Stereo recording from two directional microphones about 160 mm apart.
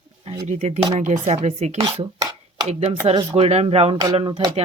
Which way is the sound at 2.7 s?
40° right (ahead or behind).